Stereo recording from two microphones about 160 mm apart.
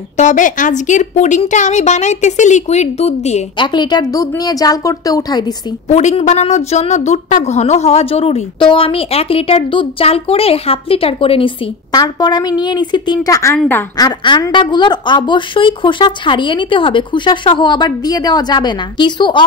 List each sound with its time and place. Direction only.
0.2 s a woman's voice: 50° left (ahead or behind)
3.5 s a woman's voice: 30° left (ahead or behind)
5.9 s a woman's voice: 45° left (ahead or behind); by 19.4 s 30° left (ahead or behind)